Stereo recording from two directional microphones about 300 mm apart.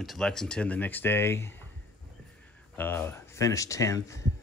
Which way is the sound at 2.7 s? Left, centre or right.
Centre.